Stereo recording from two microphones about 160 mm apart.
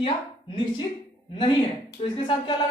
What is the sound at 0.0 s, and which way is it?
Speech, 30° left (ahead or behind).